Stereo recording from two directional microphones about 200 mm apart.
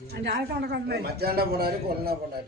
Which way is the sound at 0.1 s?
55° right (ahead or behind).